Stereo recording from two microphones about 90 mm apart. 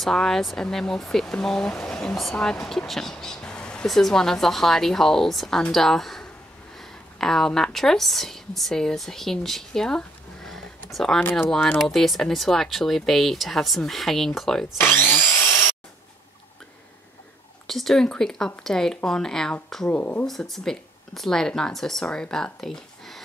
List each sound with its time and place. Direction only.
0.0 s a woman's voice: 5° left (ahead or behind)
14.8 s wood: 25° left (ahead or behind)
17.6 s speech: 5° left (ahead or behind)
19.9 s speech: 20° left (ahead or behind)
20.2 s speech: 5° left (ahead or behind)